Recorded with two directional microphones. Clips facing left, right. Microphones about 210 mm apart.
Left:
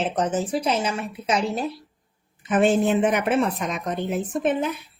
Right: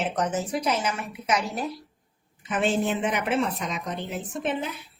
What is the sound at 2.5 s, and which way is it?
A woman's voice, 50° left (ahead or behind).